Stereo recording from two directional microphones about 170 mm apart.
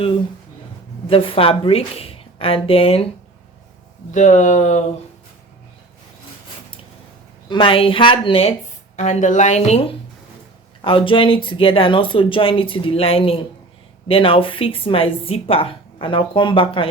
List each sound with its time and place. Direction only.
1.0 s a woman's voice: 30° left (ahead or behind)
4.1 s speech: 45° left (ahead or behind)
7.4 s a woman's voice: 30° left (ahead or behind)